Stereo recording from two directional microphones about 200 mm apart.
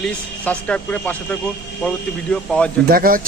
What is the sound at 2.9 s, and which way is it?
Speech, 45° right (ahead or behind).